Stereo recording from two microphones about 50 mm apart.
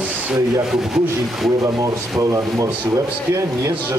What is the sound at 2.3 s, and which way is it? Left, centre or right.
Speech, right.